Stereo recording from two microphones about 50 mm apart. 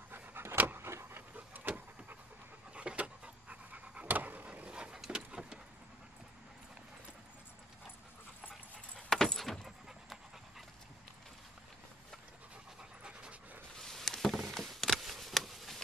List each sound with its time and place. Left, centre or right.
0.1 s pant: right
0.8 s pant: right
1.3 s vehicle: right
2.7 s pant: right
4.5 s a sound: right
5.0 s vehicle: centre
8.9 s keys jangling: centre
13.0 s dog: centre
13.7 s a sound: centre